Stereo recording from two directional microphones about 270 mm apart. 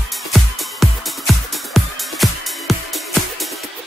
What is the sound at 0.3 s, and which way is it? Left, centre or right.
Music, centre.